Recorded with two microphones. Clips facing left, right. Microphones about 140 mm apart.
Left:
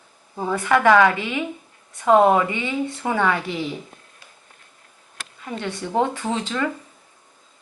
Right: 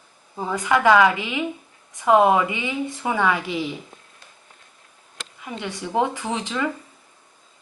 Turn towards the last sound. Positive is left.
turn(degrees=-10)  # may be behind; listen again after turning